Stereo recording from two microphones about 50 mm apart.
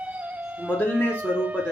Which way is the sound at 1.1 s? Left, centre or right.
Right.